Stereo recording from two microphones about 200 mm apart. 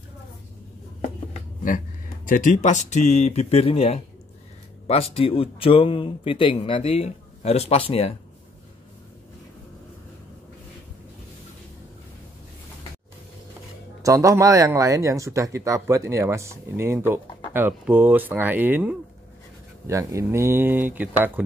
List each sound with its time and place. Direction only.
2.2 s speech: 40° left (ahead or behind)
14.0 s speech: 15° right (ahead or behind)